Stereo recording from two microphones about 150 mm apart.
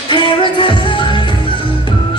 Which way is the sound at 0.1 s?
35° left (ahead or behind).